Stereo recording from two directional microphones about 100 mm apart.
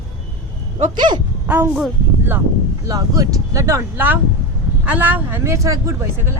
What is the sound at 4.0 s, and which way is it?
Speech, 15° right (ahead or behind).